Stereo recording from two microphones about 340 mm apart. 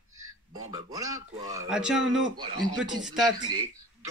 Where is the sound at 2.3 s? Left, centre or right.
Centre.